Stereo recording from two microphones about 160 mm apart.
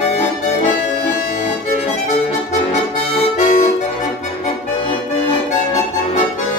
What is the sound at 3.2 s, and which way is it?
Music, 50° left (ahead or behind).